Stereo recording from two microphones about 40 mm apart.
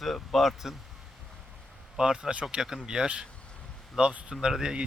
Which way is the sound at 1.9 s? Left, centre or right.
Centre.